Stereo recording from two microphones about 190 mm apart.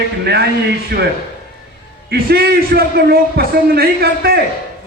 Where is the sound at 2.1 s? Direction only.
55° right (ahead or behind).